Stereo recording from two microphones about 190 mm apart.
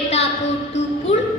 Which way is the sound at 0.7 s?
35° left (ahead or behind).